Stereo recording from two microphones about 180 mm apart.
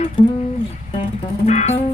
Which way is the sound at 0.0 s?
35° left (ahead or behind).